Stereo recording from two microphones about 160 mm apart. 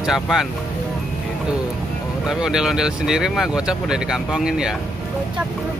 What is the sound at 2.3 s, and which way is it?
Speech, 5° right (ahead or behind).